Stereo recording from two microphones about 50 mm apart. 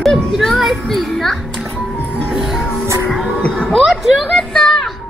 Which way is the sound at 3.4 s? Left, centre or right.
Left.